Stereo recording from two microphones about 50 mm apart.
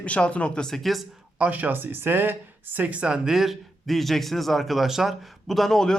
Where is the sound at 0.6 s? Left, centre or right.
Centre.